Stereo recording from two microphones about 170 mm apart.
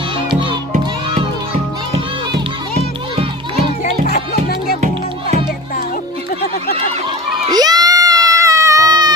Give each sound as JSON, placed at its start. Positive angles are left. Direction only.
{"t": 0.3, "sound": "music", "side_deg": -30}
{"t": 4.0, "sound": "music", "side_deg": 65}
{"t": 7.5, "sound": "baby cry", "side_deg": -25}